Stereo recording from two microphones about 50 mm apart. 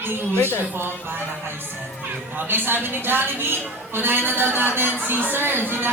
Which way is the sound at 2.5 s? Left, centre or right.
Right.